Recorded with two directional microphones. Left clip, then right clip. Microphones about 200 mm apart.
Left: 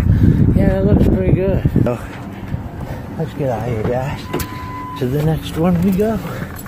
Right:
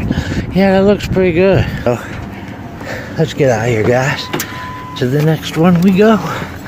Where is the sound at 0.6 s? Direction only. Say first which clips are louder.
Right 9 dB; 35° right (ahead or behind).